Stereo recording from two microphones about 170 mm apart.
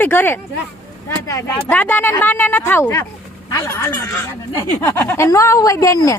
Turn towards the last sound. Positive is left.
turn(degrees=20)  # may be behind; listen again after turning